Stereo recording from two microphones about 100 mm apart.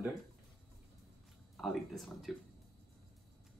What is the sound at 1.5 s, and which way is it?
Speech, centre (ahead or behind).